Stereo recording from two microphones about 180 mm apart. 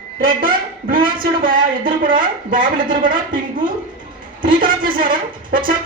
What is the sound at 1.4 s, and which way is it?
A woman's voice, 50° right (ahead or behind).